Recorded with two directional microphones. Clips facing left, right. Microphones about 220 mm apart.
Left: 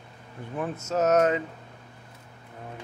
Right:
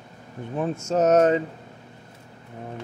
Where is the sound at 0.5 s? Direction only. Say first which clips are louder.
Right 4 dB; 25° right (ahead or behind).